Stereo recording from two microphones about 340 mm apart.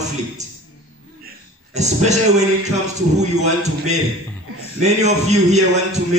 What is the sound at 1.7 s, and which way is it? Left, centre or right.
Speech, centre.